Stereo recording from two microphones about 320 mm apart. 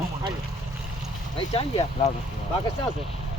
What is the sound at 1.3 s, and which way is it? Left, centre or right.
Speech, centre.